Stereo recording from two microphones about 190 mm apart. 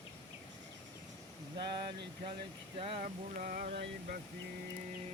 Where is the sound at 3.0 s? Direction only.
45° right (ahead or behind).